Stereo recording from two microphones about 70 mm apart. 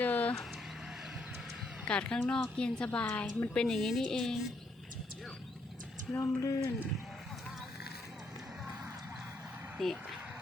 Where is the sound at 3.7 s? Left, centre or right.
Centre.